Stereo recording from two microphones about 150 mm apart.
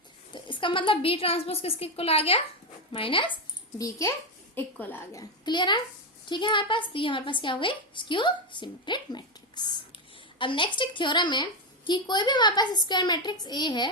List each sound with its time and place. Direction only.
0.3 s a woman's voice: 30° left (ahead or behind)
3.8 s a woman's voice: 20° left (ahead or behind)
5.2 s a woman's voice: 30° left (ahead or behind)